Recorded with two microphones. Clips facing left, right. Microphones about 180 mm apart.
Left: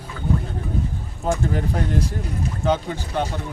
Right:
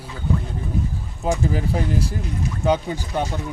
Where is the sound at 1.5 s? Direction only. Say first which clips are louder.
Right 1 dB; 5° right (ahead or behind).